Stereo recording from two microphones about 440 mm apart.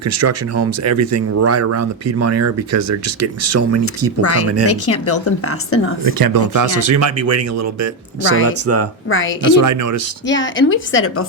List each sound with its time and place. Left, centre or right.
0.0 s speech: right
4.2 s speech: left
6.1 s speech: right
9.0 s a woman's voice: left
9.6 s speech: right
10.2 s a woman's voice: left